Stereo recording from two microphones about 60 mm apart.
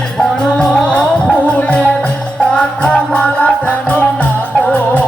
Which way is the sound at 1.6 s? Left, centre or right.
Left.